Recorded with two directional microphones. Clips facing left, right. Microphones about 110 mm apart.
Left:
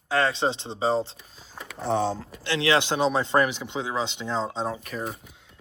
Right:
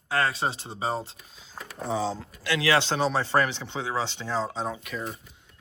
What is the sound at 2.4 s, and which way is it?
Speech, 30° left (ahead or behind).